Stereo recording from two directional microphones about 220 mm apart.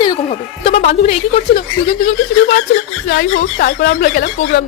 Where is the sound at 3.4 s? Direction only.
40° left (ahead or behind).